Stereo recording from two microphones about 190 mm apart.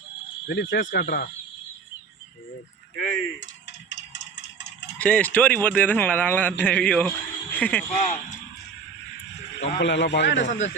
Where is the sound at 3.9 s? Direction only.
70° left (ahead or behind).